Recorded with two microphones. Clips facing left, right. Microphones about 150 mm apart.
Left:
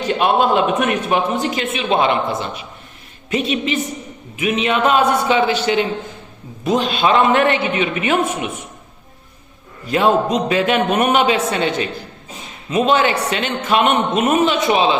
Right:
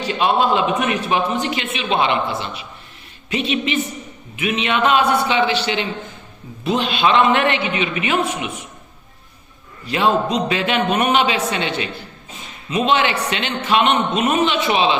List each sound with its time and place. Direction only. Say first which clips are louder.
0.0 s a man's voice: left 2 dB; 50° left (ahead or behind)
1.4 s a man's voice: left 2 dB; 40° left (ahead or behind)
9.8 s a man's voice: left 3 dB; 45° left (ahead or behind)